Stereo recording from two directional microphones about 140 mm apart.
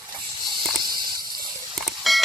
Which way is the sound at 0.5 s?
30° right (ahead or behind).